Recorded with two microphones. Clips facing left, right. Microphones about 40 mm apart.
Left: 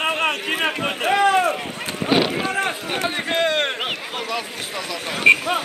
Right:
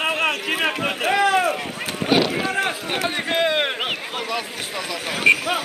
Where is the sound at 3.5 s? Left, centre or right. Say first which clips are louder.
Even; centre.